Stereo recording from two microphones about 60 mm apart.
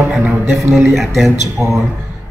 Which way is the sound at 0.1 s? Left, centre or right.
Centre.